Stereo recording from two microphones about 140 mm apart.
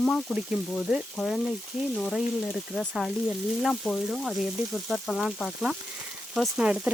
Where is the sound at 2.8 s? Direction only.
5° left (ahead or behind).